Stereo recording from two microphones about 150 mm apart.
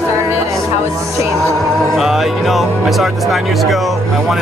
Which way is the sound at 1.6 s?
Centre (ahead or behind).